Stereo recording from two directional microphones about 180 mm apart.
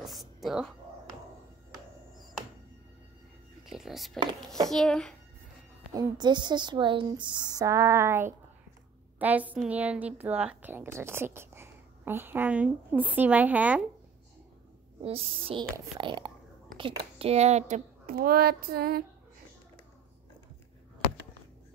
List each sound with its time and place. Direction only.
0.0 s a sound: centre (ahead or behind)
3.6 s a sound: centre (ahead or behind)
4.6 s a child's voice: 5° left (ahead or behind)
5.9 s a woman's voice: 25° right (ahead or behind)
15.0 s music: 30° right (ahead or behind)
15.7 s a woman's voice: 25° right (ahead or behind); by 18.1 s 40° right (ahead or behind)
18.1 s child singing: 55° right (ahead or behind)